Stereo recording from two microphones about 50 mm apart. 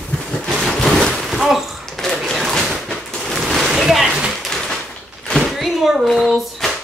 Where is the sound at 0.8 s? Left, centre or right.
Centre.